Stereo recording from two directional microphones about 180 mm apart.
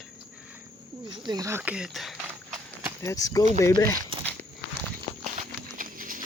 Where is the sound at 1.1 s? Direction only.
20° right (ahead or behind); by 2.2 s centre (ahead or behind).